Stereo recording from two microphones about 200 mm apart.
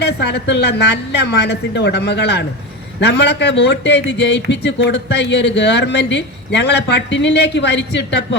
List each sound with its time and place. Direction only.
0.0 s speech: 55° left (ahead or behind)